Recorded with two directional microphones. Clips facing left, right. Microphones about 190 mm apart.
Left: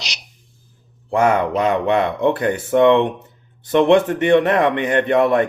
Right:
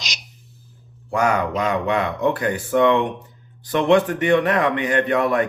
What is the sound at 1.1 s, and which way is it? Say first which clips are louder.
Speech: left 4 dB; 25° left (ahead or behind).